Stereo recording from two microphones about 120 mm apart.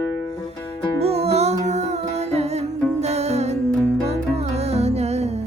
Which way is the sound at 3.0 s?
65° right (ahead or behind).